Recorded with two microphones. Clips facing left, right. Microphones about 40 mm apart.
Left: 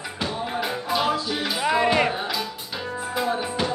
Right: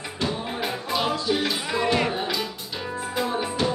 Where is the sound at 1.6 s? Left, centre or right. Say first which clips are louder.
Left 6 dB; left.